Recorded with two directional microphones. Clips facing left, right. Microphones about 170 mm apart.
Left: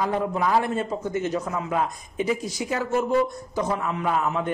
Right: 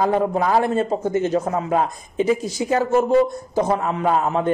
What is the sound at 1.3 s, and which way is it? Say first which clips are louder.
Speech: right 6 dB; 45° right (ahead or behind).